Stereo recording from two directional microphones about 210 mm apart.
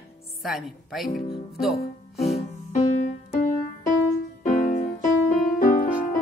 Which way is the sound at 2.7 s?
35° left (ahead or behind).